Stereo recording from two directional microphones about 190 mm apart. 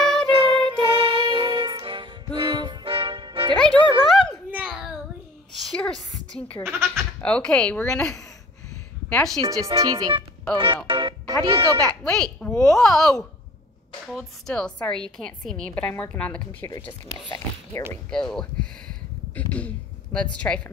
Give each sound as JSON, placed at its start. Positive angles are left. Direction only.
{"t": 0.0, "sound": "music", "side_deg": 0}
{"t": 0.3, "sound": "music", "side_deg": -25}
{"t": 3.5, "sound": "speech", "side_deg": 5}
{"t": 5.8, "sound": "a sound", "side_deg": 5}
{"t": 6.8, "sound": "a woman's voice", "side_deg": 5}
{"t": 9.4, "sound": "speech", "side_deg": -15}
{"t": 10.9, "sound": "music", "side_deg": -25}
{"t": 11.8, "sound": "a woman's voice", "side_deg": 5}
{"t": 17.8, "sound": "speech", "side_deg": 15}
{"t": 18.1, "sound": "speech", "side_deg": 5}
{"t": 19.5, "sound": "a sound", "side_deg": 5}